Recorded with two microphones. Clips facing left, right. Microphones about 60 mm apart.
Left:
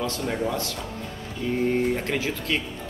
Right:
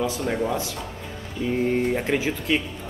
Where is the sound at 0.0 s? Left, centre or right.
Centre.